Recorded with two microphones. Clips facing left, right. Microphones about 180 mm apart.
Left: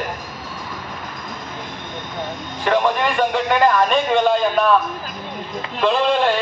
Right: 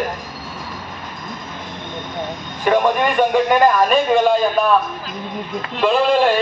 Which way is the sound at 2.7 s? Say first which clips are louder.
Right 2 dB; 10° right (ahead or behind).